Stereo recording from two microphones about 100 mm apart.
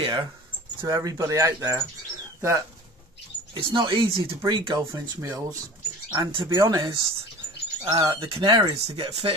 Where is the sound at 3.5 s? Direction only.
55° right (ahead or behind).